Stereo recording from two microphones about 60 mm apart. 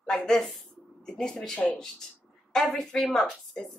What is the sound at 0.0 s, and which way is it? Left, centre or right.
A woman's voice, centre.